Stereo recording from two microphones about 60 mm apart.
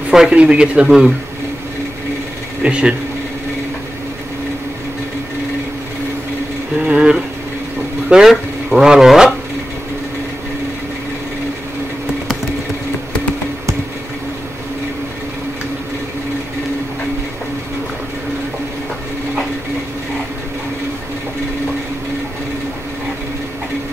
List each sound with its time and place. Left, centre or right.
0.1 s a man's voice: centre
2.6 s speech: centre
6.8 s a sound: centre